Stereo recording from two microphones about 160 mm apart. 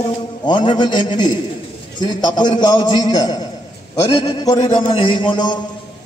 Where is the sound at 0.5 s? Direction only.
30° left (ahead or behind).